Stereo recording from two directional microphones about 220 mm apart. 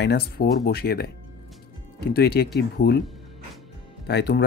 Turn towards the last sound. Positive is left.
turn(degrees=50)  # may be behind; listen again after turning